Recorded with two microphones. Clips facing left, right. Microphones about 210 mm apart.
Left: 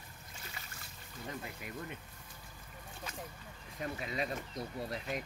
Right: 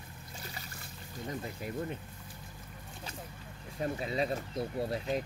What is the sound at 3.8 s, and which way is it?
Speech, 30° right (ahead or behind).